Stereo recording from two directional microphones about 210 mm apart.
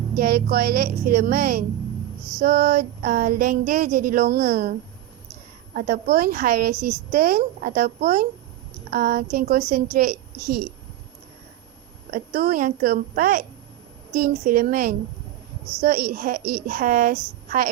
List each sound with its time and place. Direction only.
0.2 s a woman's voice: 45° right (ahead or behind)
12.1 s a woman's voice: 45° right (ahead or behind)